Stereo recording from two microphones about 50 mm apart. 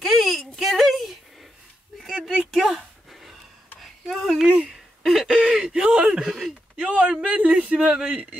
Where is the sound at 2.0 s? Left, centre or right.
Centre.